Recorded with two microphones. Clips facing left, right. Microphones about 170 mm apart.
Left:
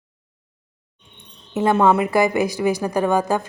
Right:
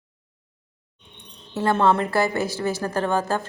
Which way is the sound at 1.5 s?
20° left (ahead or behind).